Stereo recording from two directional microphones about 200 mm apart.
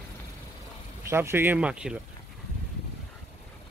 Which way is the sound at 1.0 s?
15° right (ahead or behind).